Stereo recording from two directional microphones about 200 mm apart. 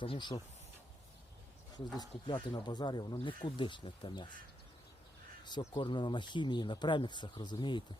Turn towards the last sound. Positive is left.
turn(degrees=25)  # may be behind; listen again after turning